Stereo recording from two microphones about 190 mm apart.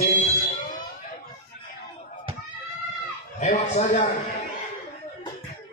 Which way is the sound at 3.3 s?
40° left (ahead or behind).